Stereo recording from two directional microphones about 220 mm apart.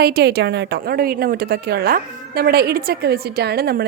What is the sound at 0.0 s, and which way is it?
A woman's voice, 45° right (ahead or behind).